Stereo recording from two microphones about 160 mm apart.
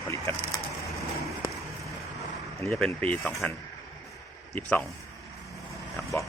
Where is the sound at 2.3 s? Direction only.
Centre (ahead or behind).